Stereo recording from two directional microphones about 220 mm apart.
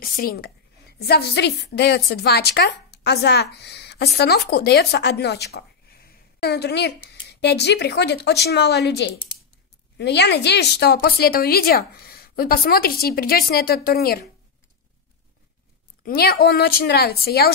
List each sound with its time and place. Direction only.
0.0 s a woman's voice: 40° left (ahead or behind)
16.0 s a woman's voice: 45° left (ahead or behind)